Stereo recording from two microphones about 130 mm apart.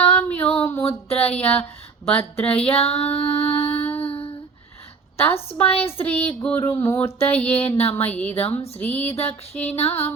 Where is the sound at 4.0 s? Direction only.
45° left (ahead or behind).